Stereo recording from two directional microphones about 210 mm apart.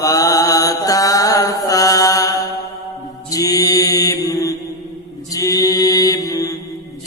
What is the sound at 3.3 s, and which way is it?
Mantra, 15° left (ahead or behind).